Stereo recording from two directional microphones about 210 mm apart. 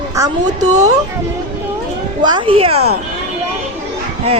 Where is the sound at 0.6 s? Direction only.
35° right (ahead or behind).